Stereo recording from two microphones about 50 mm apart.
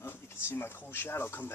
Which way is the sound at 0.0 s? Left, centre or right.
Left.